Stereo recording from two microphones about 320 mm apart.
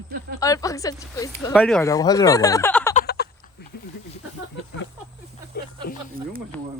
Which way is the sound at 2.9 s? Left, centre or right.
Left.